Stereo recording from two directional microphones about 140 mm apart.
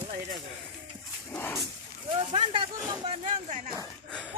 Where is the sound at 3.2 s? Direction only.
60° right (ahead or behind).